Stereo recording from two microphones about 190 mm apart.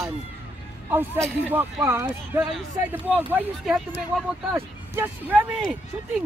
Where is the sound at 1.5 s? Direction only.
10° right (ahead or behind).